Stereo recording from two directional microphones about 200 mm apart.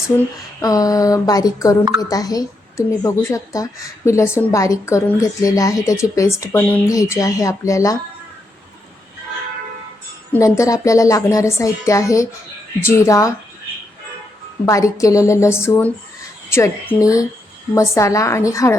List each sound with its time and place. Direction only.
0.6 s a woman's voice: 20° left (ahead or behind)
10.3 s a woman's voice: 15° left (ahead or behind)
14.6 s a woman's voice: 15° left (ahead or behind)